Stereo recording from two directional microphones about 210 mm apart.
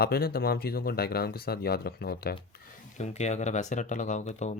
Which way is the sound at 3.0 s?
30° left (ahead or behind).